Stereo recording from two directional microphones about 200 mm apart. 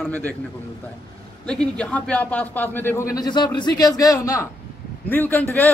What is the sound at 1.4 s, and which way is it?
A man's voice, 5° left (ahead or behind).